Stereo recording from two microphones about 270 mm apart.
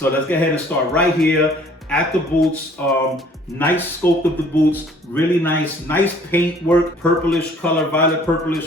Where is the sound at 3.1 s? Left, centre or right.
Centre.